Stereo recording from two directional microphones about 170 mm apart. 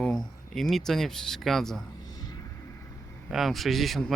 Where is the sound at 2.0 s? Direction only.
20° left (ahead or behind).